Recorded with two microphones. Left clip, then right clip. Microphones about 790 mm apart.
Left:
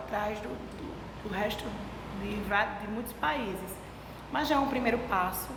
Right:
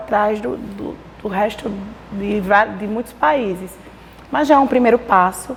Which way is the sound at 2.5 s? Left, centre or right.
Right.